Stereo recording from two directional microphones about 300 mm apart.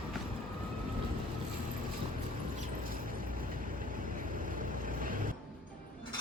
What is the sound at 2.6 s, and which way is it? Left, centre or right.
Vehicle, right.